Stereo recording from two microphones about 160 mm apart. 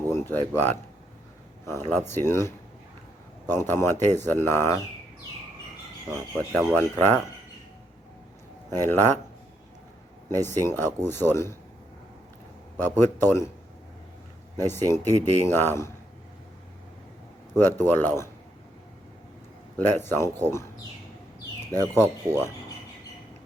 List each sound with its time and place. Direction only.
0.1 s speech: 10° left (ahead or behind)
6.3 s speech: centre (ahead or behind)
6.7 s speech: 15° left (ahead or behind)
8.7 s speech: 15° left (ahead or behind)
10.4 s speech: 15° left (ahead or behind)
12.8 s speech: 15° left (ahead or behind)
14.7 s speech: 15° left (ahead or behind)
17.6 s speech: 15° left (ahead or behind)
19.7 s speech: 15° left (ahead or behind)
21.8 s speech: 15° left (ahead or behind)